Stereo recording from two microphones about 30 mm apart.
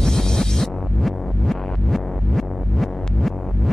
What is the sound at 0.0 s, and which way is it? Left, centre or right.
Music, centre.